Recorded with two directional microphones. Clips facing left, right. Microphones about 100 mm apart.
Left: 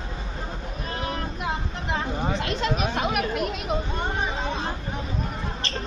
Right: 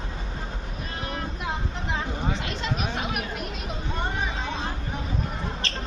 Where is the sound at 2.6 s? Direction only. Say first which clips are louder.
Left 5 dB; 80° left.